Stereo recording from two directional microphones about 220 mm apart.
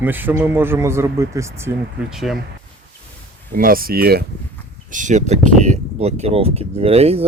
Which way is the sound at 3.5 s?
40° right (ahead or behind).